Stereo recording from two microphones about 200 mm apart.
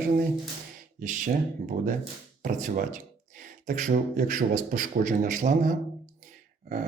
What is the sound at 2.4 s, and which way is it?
Speech, 40° right (ahead or behind).